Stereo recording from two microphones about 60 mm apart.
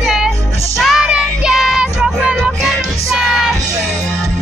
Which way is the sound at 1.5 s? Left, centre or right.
Centre.